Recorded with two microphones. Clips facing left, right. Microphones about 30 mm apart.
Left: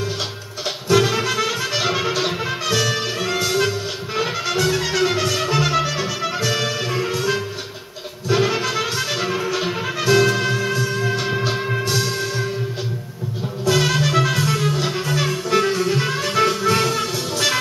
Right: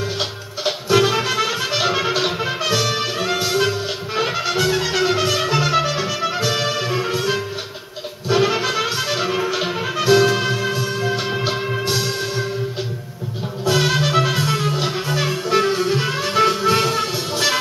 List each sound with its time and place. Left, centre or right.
0.7 s music: centre
13.7 s music: centre